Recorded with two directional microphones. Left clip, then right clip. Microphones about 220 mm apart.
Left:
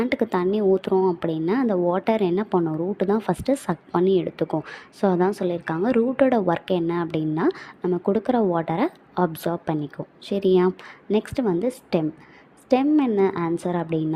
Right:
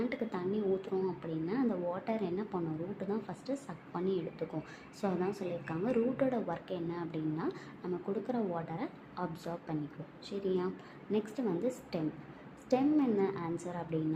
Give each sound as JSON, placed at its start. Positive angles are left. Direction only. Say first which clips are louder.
{"t": 0.0, "sound": "a woman's voice", "louder": "left 14 dB", "side_deg": 45}